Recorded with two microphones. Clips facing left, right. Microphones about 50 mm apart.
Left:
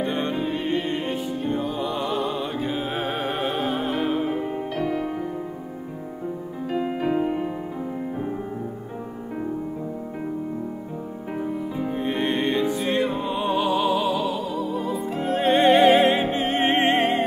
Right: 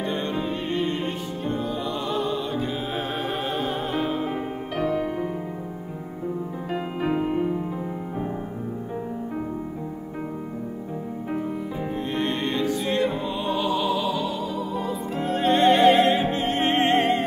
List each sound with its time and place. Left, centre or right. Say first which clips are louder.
0.0 s music: left 2 dB; centre
0.3 s music: left 2 dB; centre
6.7 s music: left 2 dB; centre
12.0 s music: left 2 dB; centre